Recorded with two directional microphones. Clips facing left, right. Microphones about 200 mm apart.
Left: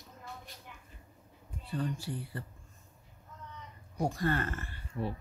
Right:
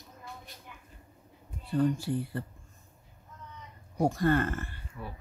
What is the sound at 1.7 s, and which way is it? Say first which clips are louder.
Speech: right 8 dB; 45° right (ahead or behind).